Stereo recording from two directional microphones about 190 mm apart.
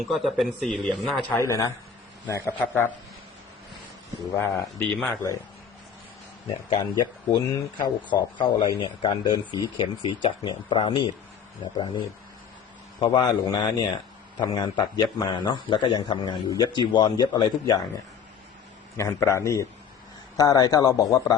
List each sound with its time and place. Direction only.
0.0 s speech: centre (ahead or behind)
1.4 s a man's voice: 15° left (ahead or behind)
4.4 s a man's voice: 15° left (ahead or behind)
6.7 s speech: 20° left (ahead or behind)
18.9 s a man's voice: 15° left (ahead or behind)